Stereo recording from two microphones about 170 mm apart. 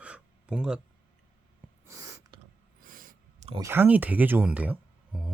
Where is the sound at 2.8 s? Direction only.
55° right (ahead or behind).